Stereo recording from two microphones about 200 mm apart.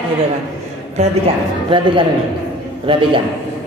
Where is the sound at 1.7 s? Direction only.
25° right (ahead or behind).